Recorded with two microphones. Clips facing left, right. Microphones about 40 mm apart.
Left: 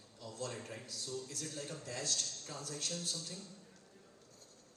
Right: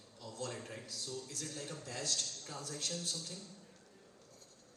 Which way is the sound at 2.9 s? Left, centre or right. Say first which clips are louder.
Even; left.